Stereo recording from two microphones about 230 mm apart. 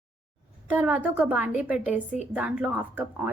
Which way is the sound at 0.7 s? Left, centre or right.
Centre.